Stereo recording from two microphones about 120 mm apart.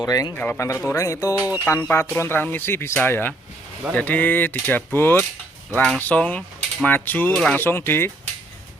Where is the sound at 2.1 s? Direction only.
20° left (ahead or behind).